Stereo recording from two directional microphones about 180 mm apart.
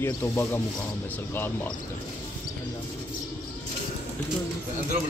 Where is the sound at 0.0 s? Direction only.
10° left (ahead or behind).